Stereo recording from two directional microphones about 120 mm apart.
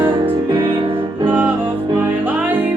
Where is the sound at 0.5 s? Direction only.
45° right (ahead or behind).